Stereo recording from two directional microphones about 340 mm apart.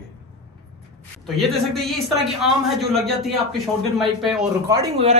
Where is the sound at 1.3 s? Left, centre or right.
Centre.